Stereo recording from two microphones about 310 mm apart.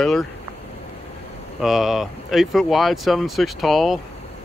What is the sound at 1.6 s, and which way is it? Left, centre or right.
Speech, centre.